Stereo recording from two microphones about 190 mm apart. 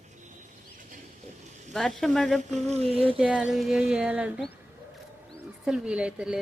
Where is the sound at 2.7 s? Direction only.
30° right (ahead or behind).